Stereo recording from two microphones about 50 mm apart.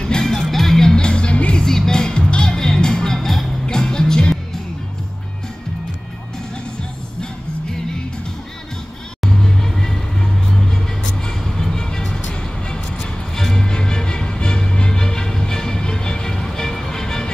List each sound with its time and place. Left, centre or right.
0.0 s music: centre
1.6 s music: centre
9.2 s music: centre
11.2 s music: centre